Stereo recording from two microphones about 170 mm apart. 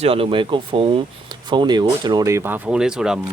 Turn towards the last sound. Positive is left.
turn(degrees=-5)  # may be behind; listen again after turning